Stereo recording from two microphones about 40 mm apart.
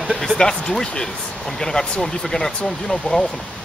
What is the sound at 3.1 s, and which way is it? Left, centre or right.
Speech, left.